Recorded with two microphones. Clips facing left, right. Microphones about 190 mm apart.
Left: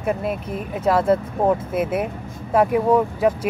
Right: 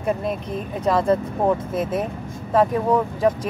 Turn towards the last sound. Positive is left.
turn(degrees=10)  # may be behind; listen again after turning